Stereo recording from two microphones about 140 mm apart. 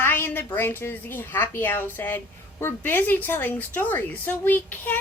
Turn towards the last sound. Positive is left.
turn(degrees=15)  # may be behind; listen again after turning